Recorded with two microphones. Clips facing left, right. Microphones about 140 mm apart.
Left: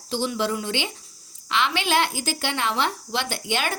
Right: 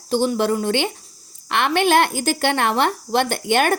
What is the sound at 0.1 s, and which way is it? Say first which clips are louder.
A woman's voice: right 6 dB; 50° right (ahead or behind).